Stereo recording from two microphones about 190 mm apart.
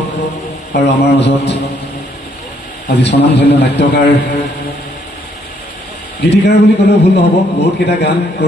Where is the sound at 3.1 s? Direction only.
65° left (ahead or behind).